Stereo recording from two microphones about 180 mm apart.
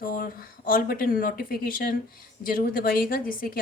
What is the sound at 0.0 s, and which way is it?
A woman's voice, 50° left (ahead or behind).